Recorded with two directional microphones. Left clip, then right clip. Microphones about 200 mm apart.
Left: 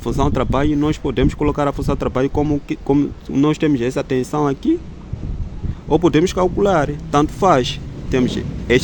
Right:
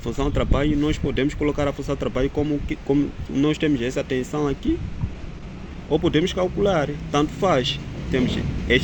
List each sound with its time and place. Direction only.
0.0 s speech: 65° left (ahead or behind)
5.9 s speech: 75° left (ahead or behind)